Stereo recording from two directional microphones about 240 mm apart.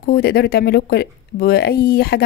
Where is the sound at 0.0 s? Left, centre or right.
Left.